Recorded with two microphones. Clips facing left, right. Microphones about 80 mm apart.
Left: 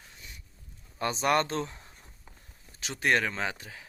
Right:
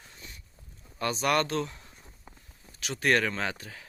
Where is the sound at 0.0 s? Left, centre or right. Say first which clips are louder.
Right 1 dB; centre.